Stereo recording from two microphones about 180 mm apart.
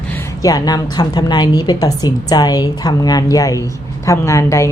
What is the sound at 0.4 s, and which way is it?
A woman's voice, 20° left (ahead or behind).